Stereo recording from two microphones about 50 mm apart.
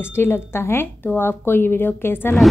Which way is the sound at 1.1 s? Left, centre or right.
Left.